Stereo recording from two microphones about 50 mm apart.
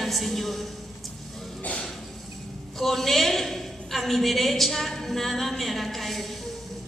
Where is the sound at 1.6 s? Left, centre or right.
Left.